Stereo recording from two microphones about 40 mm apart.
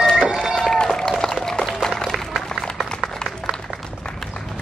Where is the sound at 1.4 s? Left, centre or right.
Centre.